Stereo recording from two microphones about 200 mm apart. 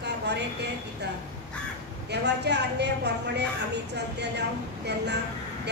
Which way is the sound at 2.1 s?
55° right (ahead or behind).